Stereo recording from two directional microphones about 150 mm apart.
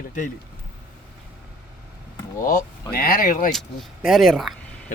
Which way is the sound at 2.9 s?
75° left (ahead or behind).